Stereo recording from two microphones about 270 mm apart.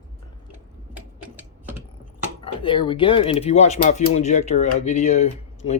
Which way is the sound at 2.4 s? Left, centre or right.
Centre.